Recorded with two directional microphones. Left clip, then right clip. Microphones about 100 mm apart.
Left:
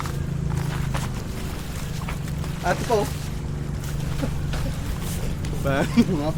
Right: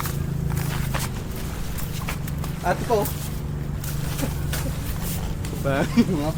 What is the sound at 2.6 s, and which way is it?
Speech, 15° left (ahead or behind).